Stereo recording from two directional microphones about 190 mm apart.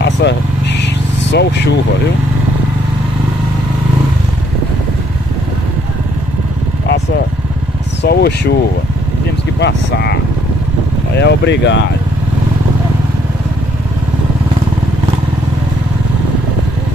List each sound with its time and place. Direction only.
0.0 s vehicle: 65° left (ahead or behind)
8.0 s speech: 60° left (ahead or behind)
9.6 s speech: 65° left (ahead or behind)
11.1 s speech: 65° left (ahead or behind)